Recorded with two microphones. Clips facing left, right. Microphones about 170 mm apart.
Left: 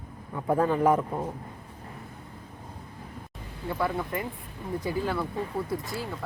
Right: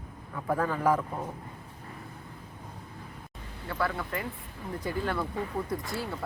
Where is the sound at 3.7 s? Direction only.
15° left (ahead or behind).